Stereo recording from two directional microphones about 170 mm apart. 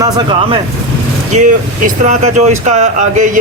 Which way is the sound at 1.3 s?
45° right (ahead or behind).